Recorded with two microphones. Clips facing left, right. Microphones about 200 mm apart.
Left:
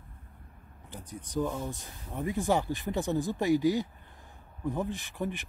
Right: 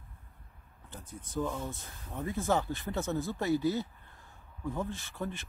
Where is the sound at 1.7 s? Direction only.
15° left (ahead or behind).